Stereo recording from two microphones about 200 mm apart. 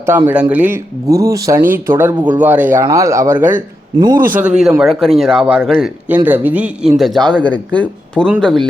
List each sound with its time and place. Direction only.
0.0 s speech: 10° right (ahead or behind)
3.9 s a man's voice: 20° right (ahead or behind)
4.3 s a man's voice: 5° right (ahead or behind)